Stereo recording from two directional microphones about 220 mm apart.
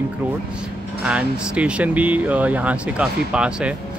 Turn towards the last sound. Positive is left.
turn(degrees=-5)  # may be behind; listen again after turning